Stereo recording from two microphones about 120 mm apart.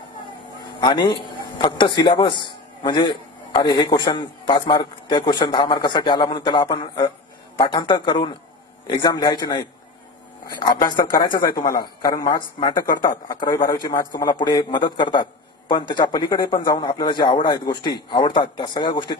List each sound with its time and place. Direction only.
0.7 s a man's voice: 40° left (ahead or behind)